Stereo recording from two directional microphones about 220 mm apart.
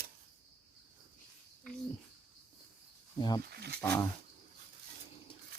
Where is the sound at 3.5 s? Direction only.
45° right (ahead or behind).